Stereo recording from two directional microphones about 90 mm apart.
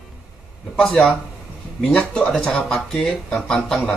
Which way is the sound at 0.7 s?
10° left (ahead or behind).